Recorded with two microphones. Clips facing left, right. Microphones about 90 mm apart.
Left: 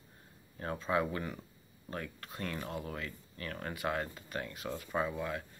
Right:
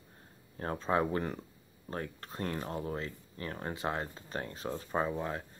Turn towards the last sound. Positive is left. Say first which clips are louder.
# right 2 dB
turn(degrees=-30)  # may be behind; listen again after turning